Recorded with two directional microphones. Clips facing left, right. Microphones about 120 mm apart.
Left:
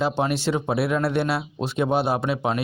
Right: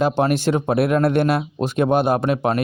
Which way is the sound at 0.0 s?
50° right (ahead or behind).